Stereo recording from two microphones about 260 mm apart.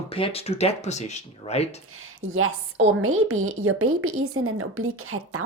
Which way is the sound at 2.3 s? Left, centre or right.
Right.